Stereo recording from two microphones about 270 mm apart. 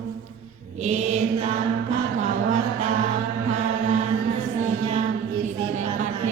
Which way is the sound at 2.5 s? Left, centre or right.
Right.